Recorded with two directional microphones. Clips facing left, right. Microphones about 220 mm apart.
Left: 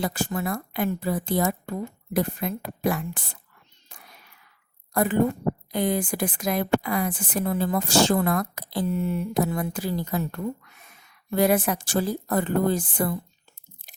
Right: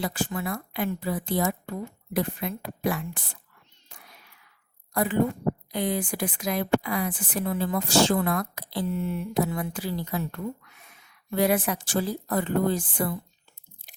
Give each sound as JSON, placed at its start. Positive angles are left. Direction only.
{"t": 0.0, "sound": "speech", "side_deg": 45}
{"t": 4.9, "sound": "speech", "side_deg": 45}